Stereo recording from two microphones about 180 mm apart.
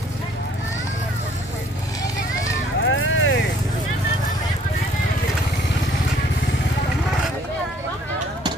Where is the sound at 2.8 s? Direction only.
90° left.